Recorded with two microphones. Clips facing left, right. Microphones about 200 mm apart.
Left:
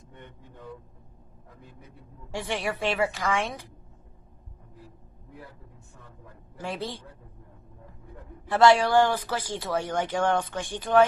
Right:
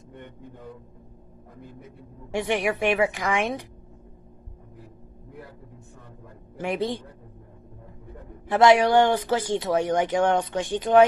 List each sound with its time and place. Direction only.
2.3 s a woman's voice: 20° right (ahead or behind)
6.6 s a woman's voice: 20° right (ahead or behind)
8.5 s speech: 20° right (ahead or behind)